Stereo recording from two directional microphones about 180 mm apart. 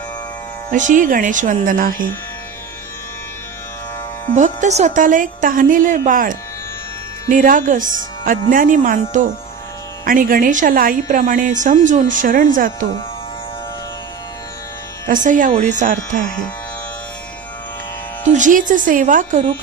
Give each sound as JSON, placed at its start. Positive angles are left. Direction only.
{"t": 0.7, "sound": "speech", "side_deg": -45}
{"t": 4.4, "sound": "speech", "side_deg": -40}
{"t": 15.0, "sound": "speech", "side_deg": -45}
{"t": 18.3, "sound": "speech", "side_deg": -45}